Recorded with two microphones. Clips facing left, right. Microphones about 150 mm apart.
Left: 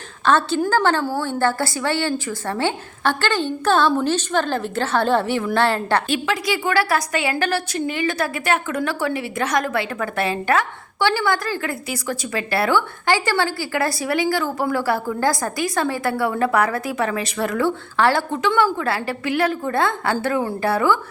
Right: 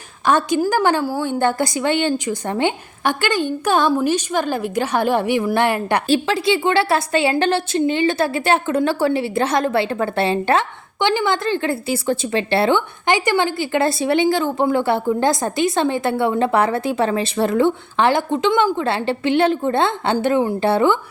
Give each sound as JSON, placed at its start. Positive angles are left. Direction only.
{"t": 0.3, "sound": "a woman's voice", "side_deg": -15}
{"t": 6.1, "sound": "a woman's voice", "side_deg": -30}